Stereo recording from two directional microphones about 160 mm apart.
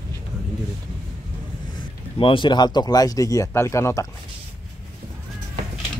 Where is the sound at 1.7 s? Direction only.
30° left (ahead or behind).